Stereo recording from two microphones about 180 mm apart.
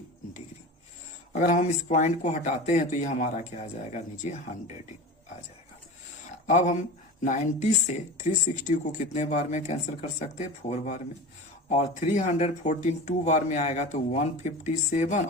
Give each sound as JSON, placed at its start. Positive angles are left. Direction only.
{"t": 1.3, "sound": "speech", "side_deg": 40}
{"t": 6.5, "sound": "speech", "side_deg": 40}